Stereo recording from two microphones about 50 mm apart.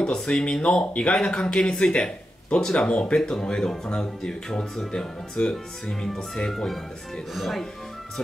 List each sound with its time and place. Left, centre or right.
0.0 s speech: centre